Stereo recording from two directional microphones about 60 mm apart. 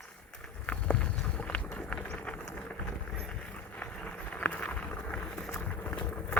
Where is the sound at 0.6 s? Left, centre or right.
Left.